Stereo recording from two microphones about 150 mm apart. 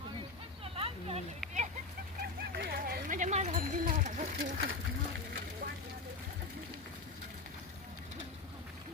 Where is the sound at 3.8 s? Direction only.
60° right (ahead or behind).